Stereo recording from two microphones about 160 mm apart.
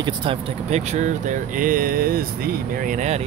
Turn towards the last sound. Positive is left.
turn(degrees=-45)  # may be behind; listen again after turning